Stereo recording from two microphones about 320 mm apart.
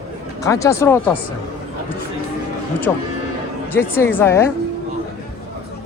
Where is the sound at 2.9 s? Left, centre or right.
Centre.